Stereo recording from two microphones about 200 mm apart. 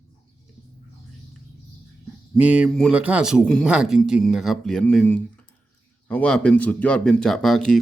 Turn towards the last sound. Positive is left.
turn(degrees=0)  # may be behind; listen again after turning